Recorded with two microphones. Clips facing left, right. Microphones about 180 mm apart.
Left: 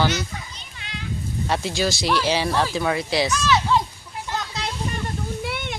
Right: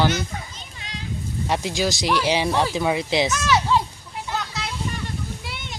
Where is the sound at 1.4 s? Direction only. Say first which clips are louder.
Even; 15° right (ahead or behind).